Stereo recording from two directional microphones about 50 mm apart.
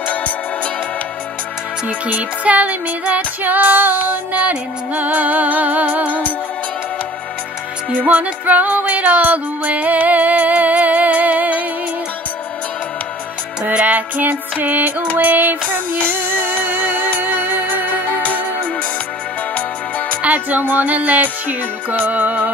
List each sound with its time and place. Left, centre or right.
1.9 s music: right
8.1 s music: right
13.7 s music: right
18.0 s music: left
20.2 s music: right